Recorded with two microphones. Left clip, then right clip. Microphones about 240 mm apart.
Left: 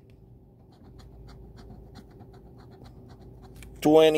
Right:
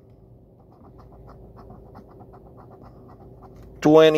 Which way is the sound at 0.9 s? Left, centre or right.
Centre.